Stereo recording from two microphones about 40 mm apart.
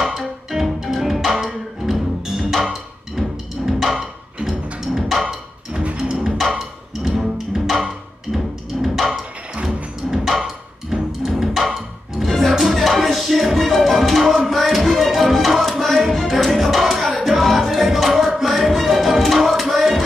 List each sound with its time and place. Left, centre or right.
0.5 s music: centre
5.2 s music: centre
7.0 s music: centre
9.6 s music: right
10.1 s music: centre
10.4 s music: centre
14.2 s tabla: centre
15.6 s music: centre